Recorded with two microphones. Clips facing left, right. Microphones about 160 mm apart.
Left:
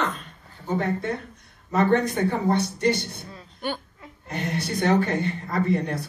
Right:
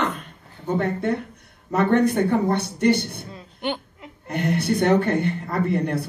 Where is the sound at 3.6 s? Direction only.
20° right (ahead or behind).